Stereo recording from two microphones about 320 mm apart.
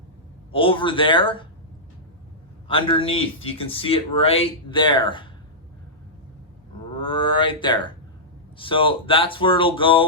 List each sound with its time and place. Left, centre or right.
0.5 s speech: centre
2.6 s speech: centre
7.0 s speech: centre